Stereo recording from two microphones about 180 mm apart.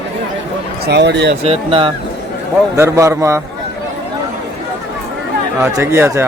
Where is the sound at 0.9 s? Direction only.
70° right (ahead or behind).